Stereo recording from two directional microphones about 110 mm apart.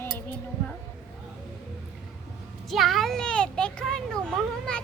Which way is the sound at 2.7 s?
Centre (ahead or behind).